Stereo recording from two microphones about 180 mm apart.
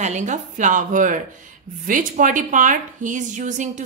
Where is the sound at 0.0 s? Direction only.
40° right (ahead or behind).